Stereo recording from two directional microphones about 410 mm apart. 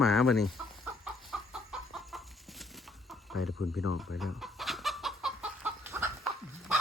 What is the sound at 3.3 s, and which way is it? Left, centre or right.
Speech, left.